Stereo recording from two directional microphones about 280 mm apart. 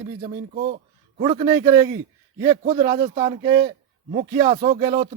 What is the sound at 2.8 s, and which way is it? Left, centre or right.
Speech, right.